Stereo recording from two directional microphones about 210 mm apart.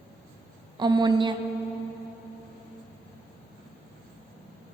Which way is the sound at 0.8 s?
20° right (ahead or behind).